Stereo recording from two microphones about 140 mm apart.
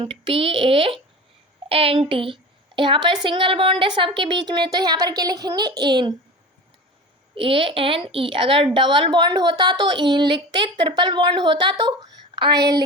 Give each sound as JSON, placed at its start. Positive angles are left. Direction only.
{"t": 0.0, "sound": "a woman's voice", "side_deg": -40}
{"t": 7.3, "sound": "a woman's voice", "side_deg": -40}